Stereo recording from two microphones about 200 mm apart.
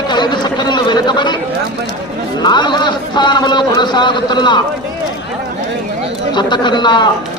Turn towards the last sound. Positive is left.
turn(degrees=20)  # may be behind; listen again after turning